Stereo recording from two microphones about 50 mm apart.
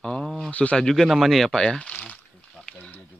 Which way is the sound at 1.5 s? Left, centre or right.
Centre.